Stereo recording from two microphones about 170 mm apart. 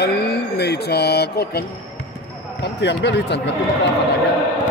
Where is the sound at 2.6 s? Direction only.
85° left.